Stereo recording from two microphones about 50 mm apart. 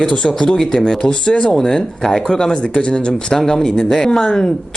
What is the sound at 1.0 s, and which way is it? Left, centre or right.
Speech, left.